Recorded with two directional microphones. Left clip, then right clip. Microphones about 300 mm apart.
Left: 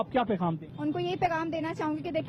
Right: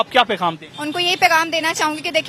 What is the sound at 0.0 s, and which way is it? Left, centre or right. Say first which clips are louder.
A woman's voice: right 12 dB; centre.